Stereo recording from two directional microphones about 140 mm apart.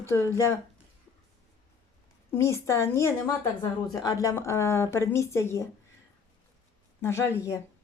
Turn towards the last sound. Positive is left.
turn(degrees=20)  # may be behind; listen again after turning